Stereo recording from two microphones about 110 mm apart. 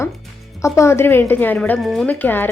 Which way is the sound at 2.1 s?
15° left (ahead or behind).